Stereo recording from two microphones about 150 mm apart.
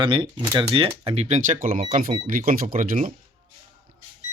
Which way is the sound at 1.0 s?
45° right (ahead or behind).